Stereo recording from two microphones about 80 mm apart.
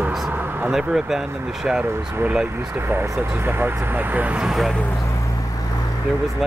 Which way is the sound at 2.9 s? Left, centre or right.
Right.